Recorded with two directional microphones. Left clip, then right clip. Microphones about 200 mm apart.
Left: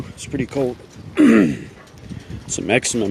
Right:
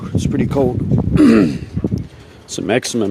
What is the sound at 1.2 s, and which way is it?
Speech, 5° right (ahead or behind).